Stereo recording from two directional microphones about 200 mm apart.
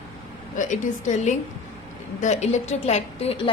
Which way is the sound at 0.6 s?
40° left (ahead or behind).